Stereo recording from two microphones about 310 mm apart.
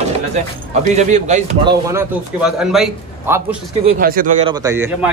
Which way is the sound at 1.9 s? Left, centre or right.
Centre.